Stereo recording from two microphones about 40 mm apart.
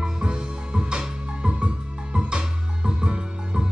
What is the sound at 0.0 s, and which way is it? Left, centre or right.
Music, right.